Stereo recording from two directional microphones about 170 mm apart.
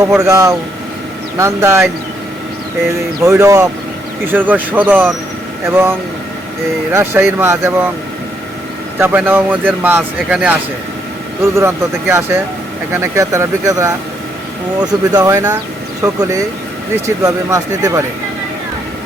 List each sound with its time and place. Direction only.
0.2 s speech: 20° right (ahead or behind)
9.0 s speech: 10° right (ahead or behind)